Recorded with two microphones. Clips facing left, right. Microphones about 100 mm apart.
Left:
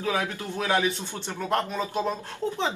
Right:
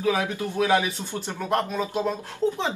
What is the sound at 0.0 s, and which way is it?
A woman's voice, 15° right (ahead or behind).